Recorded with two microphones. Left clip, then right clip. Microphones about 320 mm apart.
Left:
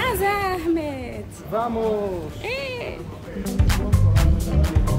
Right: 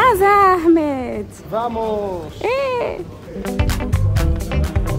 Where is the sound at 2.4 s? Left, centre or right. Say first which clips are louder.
Right 11 dB; right.